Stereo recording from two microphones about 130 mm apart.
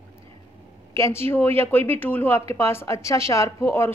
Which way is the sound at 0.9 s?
20° left (ahead or behind).